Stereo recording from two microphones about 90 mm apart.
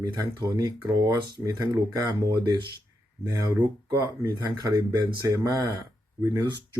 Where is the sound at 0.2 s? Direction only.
40° right (ahead or behind).